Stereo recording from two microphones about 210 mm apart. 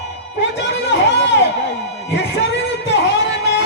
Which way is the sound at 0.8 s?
55° left (ahead or behind).